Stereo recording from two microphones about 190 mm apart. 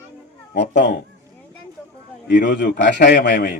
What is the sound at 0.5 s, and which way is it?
Speech, 65° left (ahead or behind).